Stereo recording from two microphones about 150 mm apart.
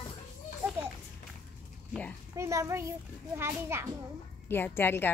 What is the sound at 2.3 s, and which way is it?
A child's voice, 20° right (ahead or behind).